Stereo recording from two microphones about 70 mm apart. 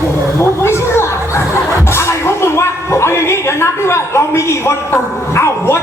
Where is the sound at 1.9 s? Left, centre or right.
Left.